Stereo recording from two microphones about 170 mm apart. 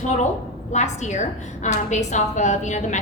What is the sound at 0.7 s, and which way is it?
A woman's voice, 45° left (ahead or behind).